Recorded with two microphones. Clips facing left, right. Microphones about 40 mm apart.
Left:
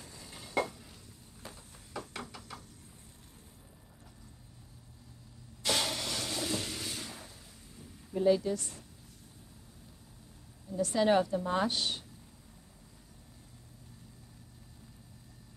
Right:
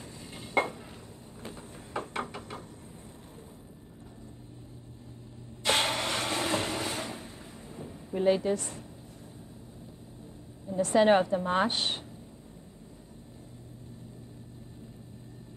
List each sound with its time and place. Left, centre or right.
0.2 s dishes: right
1.4 s a sound: right
5.6 s vehicle: right
10.7 s a woman's voice: right